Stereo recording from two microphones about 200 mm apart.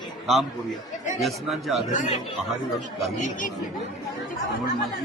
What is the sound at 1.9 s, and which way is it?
Speech, 35° left (ahead or behind).